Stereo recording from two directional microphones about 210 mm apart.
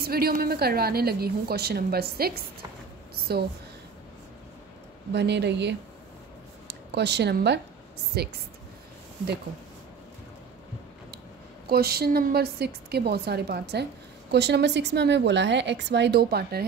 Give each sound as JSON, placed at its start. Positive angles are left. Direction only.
{"t": 0.0, "sound": "a woman's voice", "side_deg": -45}
{"t": 5.1, "sound": "a woman's voice", "side_deg": -55}
{"t": 11.7, "sound": "a woman's voice", "side_deg": -50}